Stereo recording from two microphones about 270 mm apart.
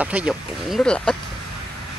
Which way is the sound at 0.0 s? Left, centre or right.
Centre.